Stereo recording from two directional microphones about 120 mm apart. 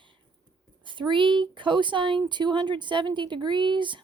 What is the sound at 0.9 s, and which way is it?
Speech, 40° right (ahead or behind).